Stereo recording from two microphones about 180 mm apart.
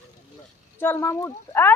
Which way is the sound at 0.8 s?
10° left (ahead or behind).